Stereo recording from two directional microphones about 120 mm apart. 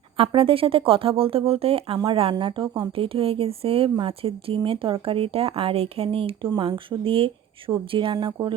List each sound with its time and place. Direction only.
0.2 s speech: 50° right (ahead or behind)
2.3 s speech: 40° right (ahead or behind)